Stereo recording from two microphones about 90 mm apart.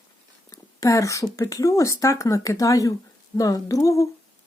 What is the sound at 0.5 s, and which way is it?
A woman's voice, 35° left (ahead or behind).